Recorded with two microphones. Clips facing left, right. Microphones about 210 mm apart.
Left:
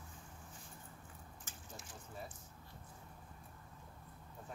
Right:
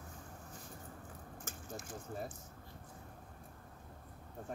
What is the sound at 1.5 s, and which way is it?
Speech, 45° right (ahead or behind).